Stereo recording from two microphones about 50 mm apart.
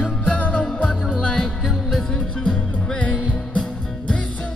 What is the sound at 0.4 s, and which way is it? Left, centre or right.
Music, left.